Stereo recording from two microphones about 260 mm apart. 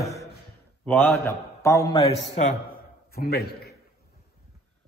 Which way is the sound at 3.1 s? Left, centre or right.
Left.